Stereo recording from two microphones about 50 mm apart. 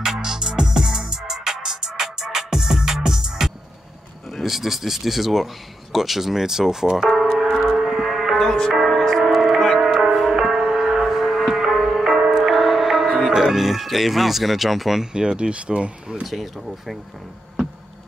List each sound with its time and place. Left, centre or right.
0.0 s music: centre
4.3 s speech: centre
7.3 s a sound: centre
8.4 s music: centre
9.2 s music: centre
13.3 s speech: centre
15.1 s speech: centre
16.3 s speech: centre